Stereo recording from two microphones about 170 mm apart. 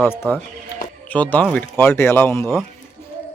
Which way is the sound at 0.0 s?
15° left (ahead or behind).